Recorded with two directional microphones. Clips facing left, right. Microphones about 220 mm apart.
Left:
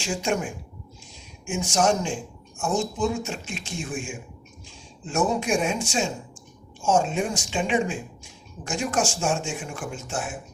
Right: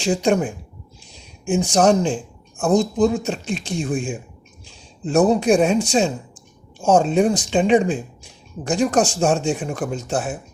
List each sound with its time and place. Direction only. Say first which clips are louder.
0.0 s speech: right 8 dB; 35° right (ahead or behind)